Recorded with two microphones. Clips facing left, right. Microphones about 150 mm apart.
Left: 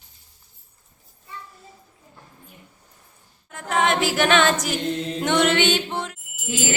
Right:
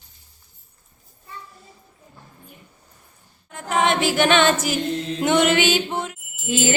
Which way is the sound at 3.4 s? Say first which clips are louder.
Right 1 dB; centre (ahead or behind).